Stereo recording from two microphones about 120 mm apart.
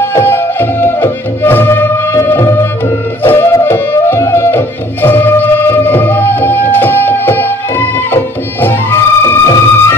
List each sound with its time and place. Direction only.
0.1 s music: 20° left (ahead or behind)